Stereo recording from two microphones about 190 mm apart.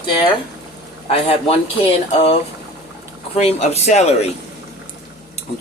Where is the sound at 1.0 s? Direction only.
30° left (ahead or behind).